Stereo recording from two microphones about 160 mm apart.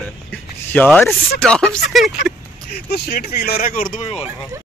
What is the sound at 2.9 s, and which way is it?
Speech, 85° left.